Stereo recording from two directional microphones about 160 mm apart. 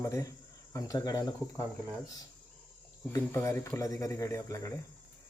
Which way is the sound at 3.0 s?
15° left (ahead or behind).